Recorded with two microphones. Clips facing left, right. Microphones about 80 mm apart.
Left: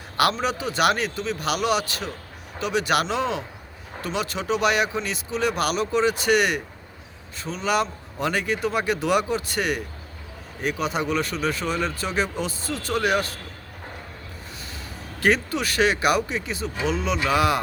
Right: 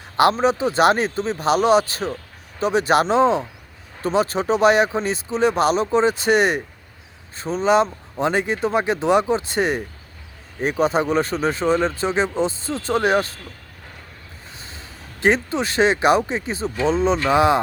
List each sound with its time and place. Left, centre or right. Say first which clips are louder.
0.2 s speech: right 6 dB; right
14.6 s speech: left 2 dB; right